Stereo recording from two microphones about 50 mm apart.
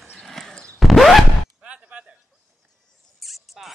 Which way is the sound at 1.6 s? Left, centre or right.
Right.